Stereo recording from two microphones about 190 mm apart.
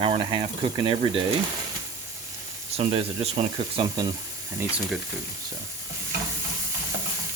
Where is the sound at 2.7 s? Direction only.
30° right (ahead or behind).